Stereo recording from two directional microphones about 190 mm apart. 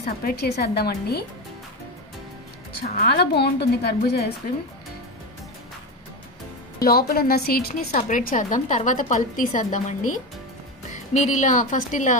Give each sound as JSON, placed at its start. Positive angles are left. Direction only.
{"t": 0.0, "sound": "a woman's voice", "side_deg": 50}
{"t": 2.8, "sound": "a woman's voice", "side_deg": 55}
{"t": 6.8, "sound": "a woman's voice", "side_deg": 55}